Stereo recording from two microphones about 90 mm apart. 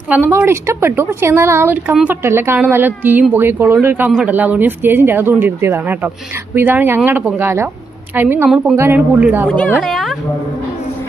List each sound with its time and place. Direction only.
0.3 s speech: 25° right (ahead or behind)
8.4 s speech: 10° right (ahead or behind)
8.7 s speech: 25° right (ahead or behind)
9.5 s speech: 15° left (ahead or behind)
9.8 s speech: centre (ahead or behind)